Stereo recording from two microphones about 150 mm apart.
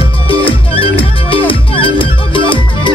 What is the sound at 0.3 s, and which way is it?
Music, 35° left (ahead or behind).